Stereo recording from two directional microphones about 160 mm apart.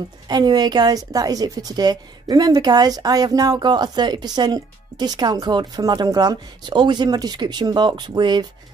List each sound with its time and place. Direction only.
0.3 s a woman's voice: 25° right (ahead or behind)